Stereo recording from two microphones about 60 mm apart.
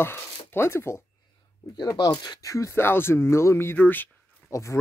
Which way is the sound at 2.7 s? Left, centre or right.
Left.